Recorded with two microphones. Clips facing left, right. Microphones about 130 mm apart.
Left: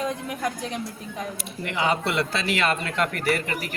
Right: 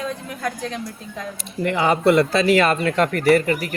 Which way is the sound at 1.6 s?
45° right (ahead or behind).